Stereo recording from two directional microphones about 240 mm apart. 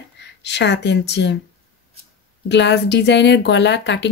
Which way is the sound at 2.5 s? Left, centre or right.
Left.